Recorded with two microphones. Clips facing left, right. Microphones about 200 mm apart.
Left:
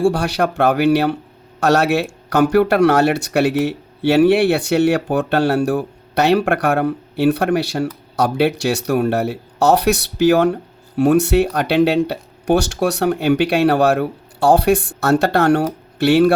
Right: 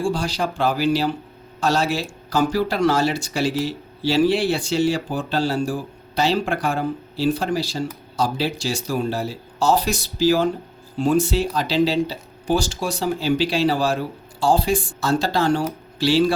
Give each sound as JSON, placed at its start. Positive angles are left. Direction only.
{"t": 0.0, "sound": "speech", "side_deg": 65}